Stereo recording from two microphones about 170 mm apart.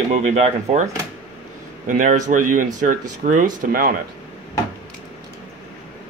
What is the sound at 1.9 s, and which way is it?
Speech, 45° right (ahead or behind).